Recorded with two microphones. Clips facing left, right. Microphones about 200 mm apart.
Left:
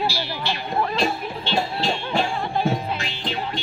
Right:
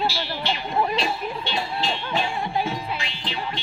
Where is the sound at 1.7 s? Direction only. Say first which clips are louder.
Left 3 dB; 45° left (ahead or behind).